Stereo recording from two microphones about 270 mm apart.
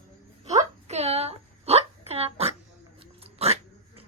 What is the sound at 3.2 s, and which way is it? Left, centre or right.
Dog, right.